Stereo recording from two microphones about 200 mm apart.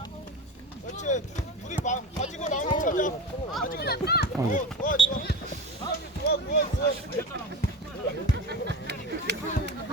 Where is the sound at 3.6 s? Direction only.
50° left (ahead or behind).